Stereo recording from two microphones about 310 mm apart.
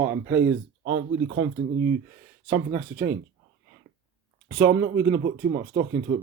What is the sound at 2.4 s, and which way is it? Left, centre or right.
Speech, centre.